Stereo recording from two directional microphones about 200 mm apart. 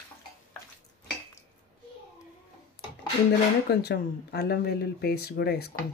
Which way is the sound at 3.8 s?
55° left (ahead or behind).